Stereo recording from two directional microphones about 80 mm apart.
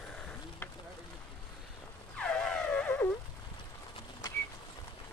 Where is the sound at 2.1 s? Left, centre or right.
Centre.